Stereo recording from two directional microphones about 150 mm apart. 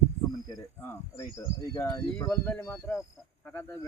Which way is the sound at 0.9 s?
15° left (ahead or behind).